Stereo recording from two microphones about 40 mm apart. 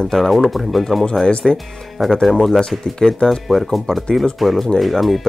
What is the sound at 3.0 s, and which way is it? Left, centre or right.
Speech, centre.